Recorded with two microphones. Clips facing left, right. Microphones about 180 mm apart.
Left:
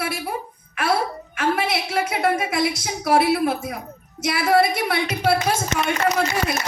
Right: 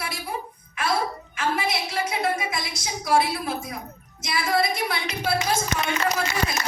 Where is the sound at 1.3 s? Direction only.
65° left (ahead or behind).